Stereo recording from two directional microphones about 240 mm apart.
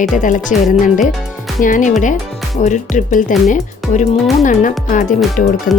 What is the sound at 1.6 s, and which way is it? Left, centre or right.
Speech, left.